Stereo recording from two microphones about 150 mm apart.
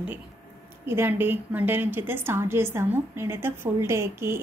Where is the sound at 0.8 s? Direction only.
15° right (ahead or behind).